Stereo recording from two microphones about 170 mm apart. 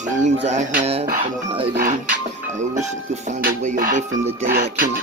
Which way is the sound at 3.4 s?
55° right (ahead or behind).